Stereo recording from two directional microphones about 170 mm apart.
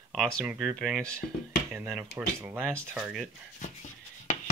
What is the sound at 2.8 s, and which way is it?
Speech, 15° right (ahead or behind).